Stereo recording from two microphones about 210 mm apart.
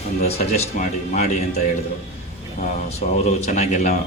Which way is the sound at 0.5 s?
35° left (ahead or behind).